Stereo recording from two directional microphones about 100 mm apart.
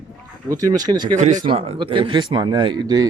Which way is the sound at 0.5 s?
40° right (ahead or behind).